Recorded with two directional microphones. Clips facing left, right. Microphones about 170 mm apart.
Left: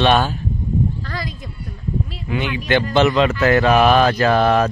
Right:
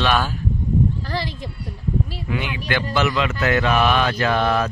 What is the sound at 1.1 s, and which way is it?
Speech, 30° right (ahead or behind).